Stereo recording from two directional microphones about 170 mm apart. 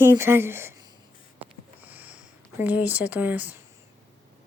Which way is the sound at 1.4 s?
10° right (ahead or behind).